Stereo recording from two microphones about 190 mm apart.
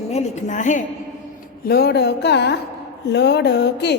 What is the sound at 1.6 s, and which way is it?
Speech, 55° left (ahead or behind).